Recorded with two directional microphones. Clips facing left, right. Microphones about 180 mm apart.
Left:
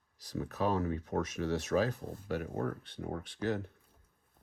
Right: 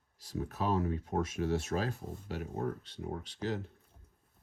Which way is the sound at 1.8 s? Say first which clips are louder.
Left 2 dB; 50° left (ahead or behind).